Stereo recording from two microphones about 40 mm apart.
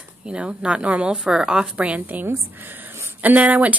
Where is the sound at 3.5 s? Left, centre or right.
Right.